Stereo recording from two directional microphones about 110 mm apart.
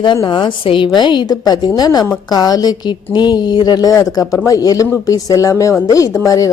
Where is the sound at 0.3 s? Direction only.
45° left (ahead or behind).